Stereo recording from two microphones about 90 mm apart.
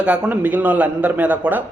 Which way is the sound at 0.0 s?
15° right (ahead or behind).